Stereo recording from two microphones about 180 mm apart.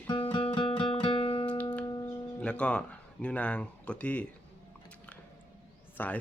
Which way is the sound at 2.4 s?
5° left (ahead or behind).